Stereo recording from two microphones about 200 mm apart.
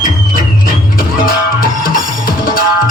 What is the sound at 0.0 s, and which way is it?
Music, 45° left (ahead or behind).